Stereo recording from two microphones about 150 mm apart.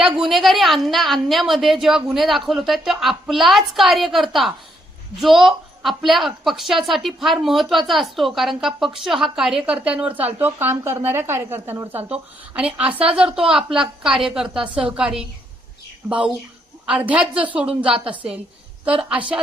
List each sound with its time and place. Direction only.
0.2 s a woman's voice: centre (ahead or behind)